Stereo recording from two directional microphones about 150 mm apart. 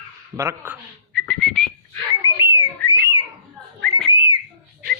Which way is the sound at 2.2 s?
20° right (ahead or behind).